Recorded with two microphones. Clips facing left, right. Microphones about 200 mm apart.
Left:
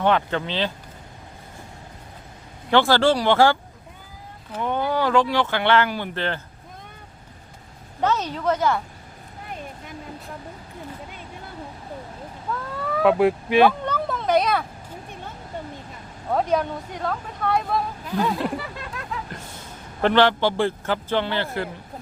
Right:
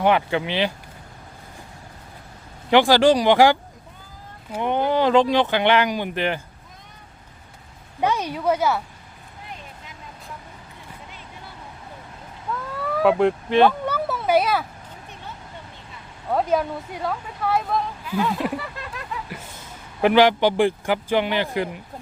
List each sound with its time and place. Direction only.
0.0 s speech: 10° right (ahead or behind)
2.6 s speech: 15° right (ahead or behind)
8.0 s speech: 10° right (ahead or behind)
12.7 s speech: centre (ahead or behind)
13.8 s a sound: 5° right (ahead or behind)
16.3 s speech: centre (ahead or behind)
20.0 s speech: 10° right (ahead or behind)